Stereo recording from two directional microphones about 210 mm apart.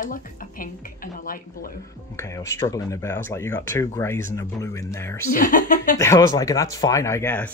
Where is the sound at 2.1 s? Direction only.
15° left (ahead or behind).